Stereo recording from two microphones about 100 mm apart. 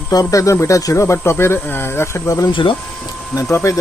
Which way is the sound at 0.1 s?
35° left (ahead or behind).